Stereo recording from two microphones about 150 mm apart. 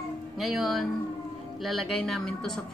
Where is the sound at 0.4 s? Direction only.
Centre (ahead or behind).